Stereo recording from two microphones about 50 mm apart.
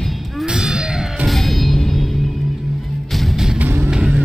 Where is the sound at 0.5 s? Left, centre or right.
Centre.